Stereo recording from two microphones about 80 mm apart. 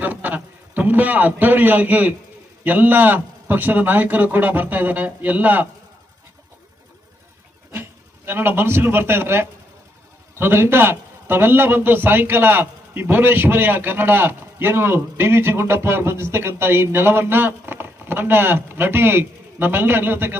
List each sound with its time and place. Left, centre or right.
0.0 s a man's voice: right
7.7 s a man's voice: right